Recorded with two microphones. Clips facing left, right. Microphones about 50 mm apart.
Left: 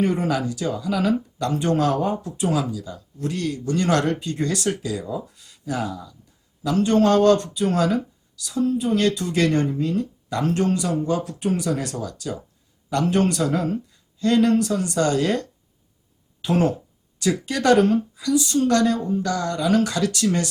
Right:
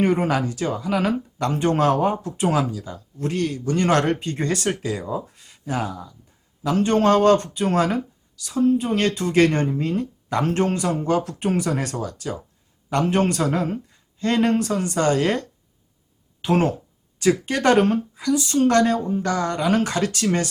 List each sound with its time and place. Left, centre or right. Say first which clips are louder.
0.0 s speech: right 2 dB; right